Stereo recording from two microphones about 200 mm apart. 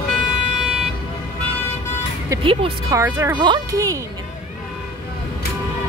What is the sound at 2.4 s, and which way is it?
Speech, 25° right (ahead or behind).